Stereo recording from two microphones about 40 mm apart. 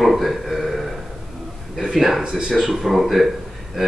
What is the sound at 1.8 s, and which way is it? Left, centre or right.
A man's voice, centre.